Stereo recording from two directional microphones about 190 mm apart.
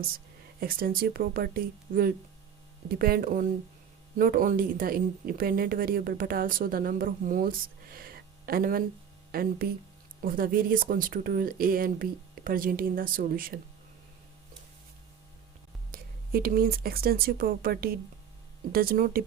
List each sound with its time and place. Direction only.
0.6 s speech: 50° right (ahead or behind)
15.9 s speech: 50° right (ahead or behind)